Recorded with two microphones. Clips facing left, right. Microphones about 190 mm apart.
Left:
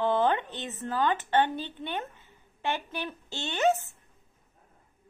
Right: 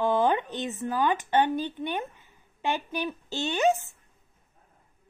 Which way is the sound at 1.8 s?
15° right (ahead or behind).